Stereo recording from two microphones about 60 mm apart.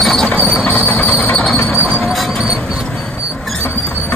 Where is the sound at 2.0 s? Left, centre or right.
Centre.